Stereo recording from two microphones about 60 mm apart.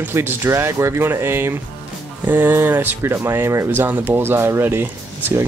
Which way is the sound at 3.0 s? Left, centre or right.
Right.